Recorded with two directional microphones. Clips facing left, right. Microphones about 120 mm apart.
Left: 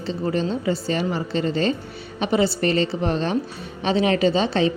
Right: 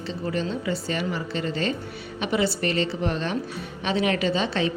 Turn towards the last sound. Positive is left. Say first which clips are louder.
# left 5 dB
turn(degrees=30)  # may be behind; listen again after turning